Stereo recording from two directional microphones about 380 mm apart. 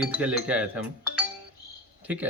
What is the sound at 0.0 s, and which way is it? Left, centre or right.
Speech, centre.